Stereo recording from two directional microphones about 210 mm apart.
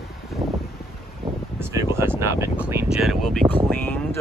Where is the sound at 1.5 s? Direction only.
10° right (ahead or behind).